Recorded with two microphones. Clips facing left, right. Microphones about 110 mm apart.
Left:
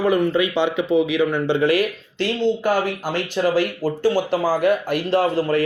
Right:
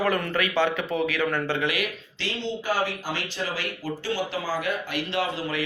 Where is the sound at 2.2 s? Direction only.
50° left (ahead or behind).